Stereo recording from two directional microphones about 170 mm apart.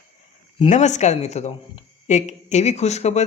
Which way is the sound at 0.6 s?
45° left (ahead or behind).